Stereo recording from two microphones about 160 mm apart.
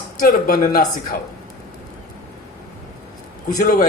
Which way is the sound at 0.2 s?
60° left (ahead or behind).